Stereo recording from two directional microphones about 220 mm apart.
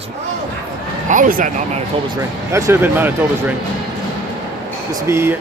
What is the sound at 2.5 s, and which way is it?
Speech, 15° right (ahead or behind).